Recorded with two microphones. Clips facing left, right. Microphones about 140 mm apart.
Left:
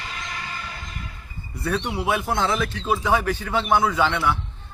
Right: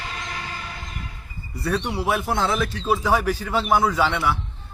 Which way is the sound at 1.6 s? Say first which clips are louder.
Right 1 dB; centre (ahead or behind).